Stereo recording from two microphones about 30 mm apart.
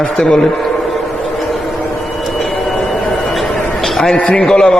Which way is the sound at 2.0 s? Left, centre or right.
Centre.